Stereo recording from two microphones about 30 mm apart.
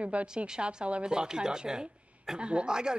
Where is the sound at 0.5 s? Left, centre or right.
Right.